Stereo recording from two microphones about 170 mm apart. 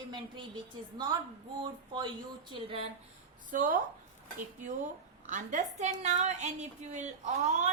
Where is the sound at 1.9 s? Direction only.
25° right (ahead or behind).